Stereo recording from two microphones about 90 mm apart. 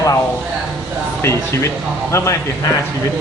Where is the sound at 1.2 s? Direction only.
30° left (ahead or behind).